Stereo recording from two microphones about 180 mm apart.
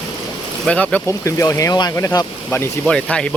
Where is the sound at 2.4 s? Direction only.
5° left (ahead or behind).